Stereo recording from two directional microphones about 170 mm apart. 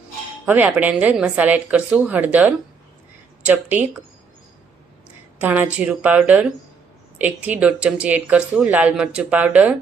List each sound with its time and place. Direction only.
0.4 s speech: 10° right (ahead or behind)
5.4 s speech: 10° right (ahead or behind)